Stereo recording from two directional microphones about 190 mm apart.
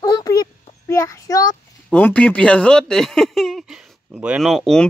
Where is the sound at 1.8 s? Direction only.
5° left (ahead or behind).